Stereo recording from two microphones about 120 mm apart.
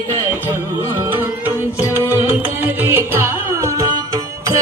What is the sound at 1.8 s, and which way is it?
Music, 20° left (ahead or behind).